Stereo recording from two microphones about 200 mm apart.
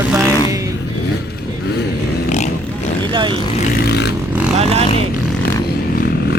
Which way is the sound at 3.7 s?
55° left (ahead or behind).